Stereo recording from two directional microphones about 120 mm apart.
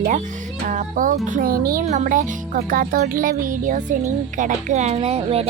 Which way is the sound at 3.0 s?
90° right.